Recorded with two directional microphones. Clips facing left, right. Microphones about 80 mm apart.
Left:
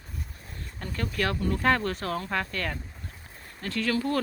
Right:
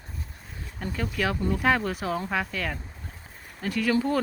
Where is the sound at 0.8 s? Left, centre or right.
Centre.